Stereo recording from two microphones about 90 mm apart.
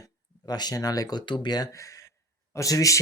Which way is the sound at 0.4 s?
50° left (ahead or behind).